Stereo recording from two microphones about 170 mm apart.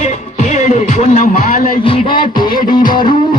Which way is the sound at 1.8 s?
30° left (ahead or behind).